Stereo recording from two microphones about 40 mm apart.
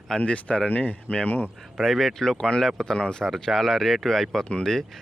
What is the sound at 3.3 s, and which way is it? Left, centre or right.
Speech, centre.